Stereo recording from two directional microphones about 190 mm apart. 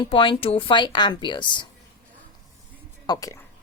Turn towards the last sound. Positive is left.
turn(degrees=15)  # may be behind; listen again after turning